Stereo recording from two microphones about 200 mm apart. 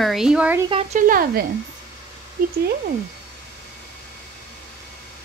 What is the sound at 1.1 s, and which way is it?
Speech, 45° right (ahead or behind).